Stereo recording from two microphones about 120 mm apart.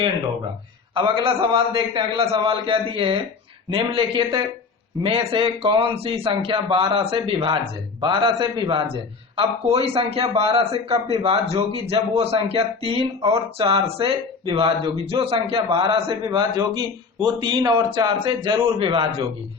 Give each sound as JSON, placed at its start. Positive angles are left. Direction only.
{"t": 0.9, "sound": "a man's voice", "side_deg": -40}
{"t": 9.3, "sound": "a man's voice", "side_deg": -55}
{"t": 16.4, "sound": "speech", "side_deg": -35}